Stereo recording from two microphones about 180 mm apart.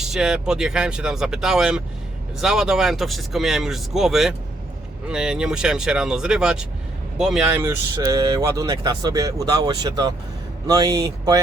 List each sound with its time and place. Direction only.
0.0 s speech: 5° right (ahead or behind); by 11.3 s 20° right (ahead or behind)